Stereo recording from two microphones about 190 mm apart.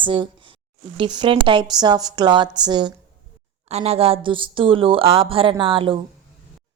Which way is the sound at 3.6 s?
35° right (ahead or behind).